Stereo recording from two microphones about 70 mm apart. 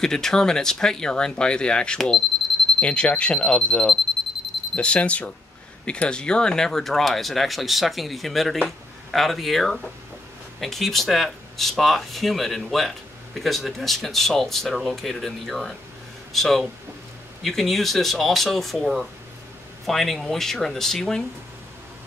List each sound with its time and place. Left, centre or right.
0.0 s speech: centre